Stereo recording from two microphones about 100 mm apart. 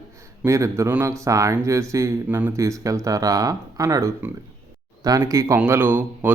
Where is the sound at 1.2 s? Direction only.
30° right (ahead or behind).